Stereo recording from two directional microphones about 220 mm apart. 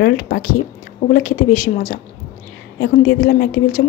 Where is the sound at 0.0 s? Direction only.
45° left (ahead or behind).